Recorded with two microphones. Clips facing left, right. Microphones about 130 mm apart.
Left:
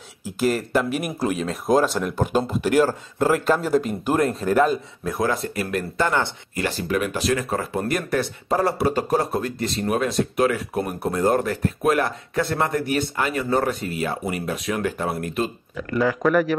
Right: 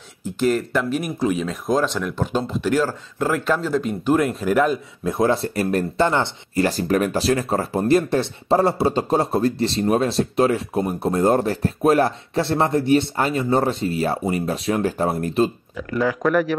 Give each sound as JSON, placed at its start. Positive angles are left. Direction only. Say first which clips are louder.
{"t": 0.2, "sound": "speech", "louder": "right 2 dB", "side_deg": 5}
{"t": 5.0, "sound": "speech", "louder": "right 5 dB", "side_deg": -25}
{"t": 6.6, "sound": "speech", "louder": "right 4 dB", "side_deg": -40}
{"t": 15.9, "sound": "speech", "louder": "even", "side_deg": 0}